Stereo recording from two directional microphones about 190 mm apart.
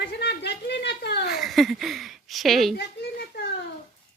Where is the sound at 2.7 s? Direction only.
60° left (ahead or behind).